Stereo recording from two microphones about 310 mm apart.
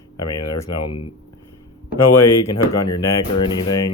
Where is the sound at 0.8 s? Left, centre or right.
Left.